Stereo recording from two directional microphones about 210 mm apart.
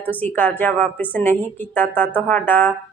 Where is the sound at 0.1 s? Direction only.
10° left (ahead or behind).